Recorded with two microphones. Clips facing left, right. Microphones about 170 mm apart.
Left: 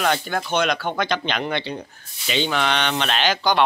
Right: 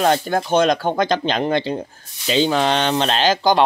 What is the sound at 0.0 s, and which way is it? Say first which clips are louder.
Speech: right 5 dB; 35° right (ahead or behind).